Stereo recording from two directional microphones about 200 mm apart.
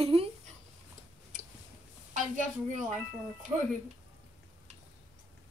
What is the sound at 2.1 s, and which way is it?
Speech, 40° right (ahead or behind).